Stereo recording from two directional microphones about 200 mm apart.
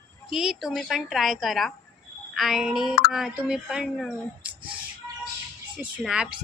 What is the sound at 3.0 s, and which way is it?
A woman's voice, centre (ahead or behind).